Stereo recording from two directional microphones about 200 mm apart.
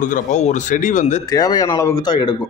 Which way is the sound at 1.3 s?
20° left (ahead or behind).